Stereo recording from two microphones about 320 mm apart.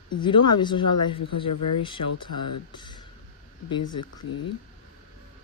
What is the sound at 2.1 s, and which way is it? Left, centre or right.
Speech, left.